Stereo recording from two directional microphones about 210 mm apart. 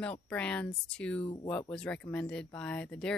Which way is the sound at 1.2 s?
25° left (ahead or behind).